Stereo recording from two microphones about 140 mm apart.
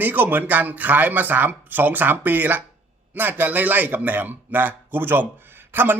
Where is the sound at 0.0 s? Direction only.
15° right (ahead or behind).